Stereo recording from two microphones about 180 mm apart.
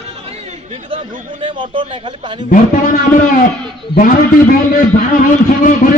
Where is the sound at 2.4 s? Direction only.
50° left (ahead or behind).